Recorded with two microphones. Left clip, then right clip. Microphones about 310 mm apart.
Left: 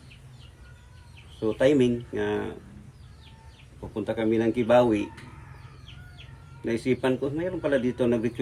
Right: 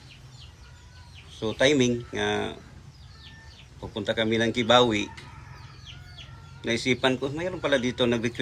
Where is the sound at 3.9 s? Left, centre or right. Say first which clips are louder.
Right 1 dB; centre.